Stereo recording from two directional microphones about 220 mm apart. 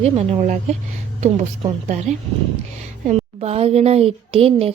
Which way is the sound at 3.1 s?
30° right (ahead or behind).